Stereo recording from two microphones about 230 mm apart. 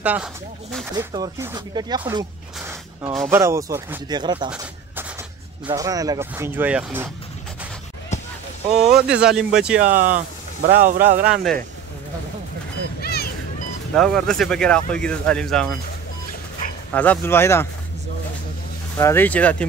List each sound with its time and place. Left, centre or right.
0.0 s speech: centre
0.9 s speech: centre
3.3 s speech: centre
5.7 s speech: centre
8.6 s speech: right
8.9 s speech: centre
9.8 s speech: right
11.2 s speech: centre
13.0 s run: left
13.9 s speech: centre
16.9 s speech: centre
18.9 s speech: centre